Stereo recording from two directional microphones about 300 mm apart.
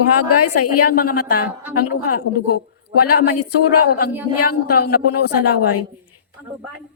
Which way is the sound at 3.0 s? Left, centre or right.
Left.